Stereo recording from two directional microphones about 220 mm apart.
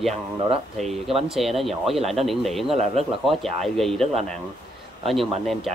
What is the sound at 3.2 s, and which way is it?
Speech, centre (ahead or behind).